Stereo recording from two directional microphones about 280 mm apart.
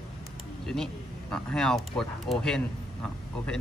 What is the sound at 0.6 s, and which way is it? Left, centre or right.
Speech, centre.